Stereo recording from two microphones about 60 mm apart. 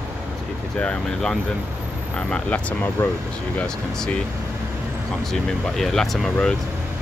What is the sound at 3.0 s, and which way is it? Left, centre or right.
Speech, left.